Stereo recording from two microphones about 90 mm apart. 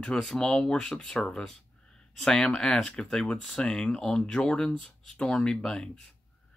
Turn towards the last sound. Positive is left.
turn(degrees=5)  # may be behind; listen again after turning